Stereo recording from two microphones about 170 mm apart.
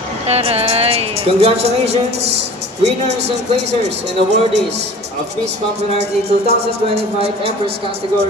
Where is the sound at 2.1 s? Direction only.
80° right.